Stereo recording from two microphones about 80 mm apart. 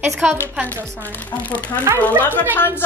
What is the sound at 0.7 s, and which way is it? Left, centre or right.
A woman's voice, left.